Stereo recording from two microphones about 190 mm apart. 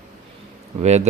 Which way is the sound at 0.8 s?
35° right (ahead or behind).